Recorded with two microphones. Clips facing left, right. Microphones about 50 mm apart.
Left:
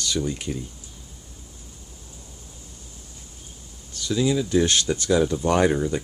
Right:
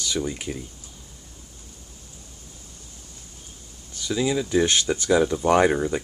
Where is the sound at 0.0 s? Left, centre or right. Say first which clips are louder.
Left 1 dB; centre.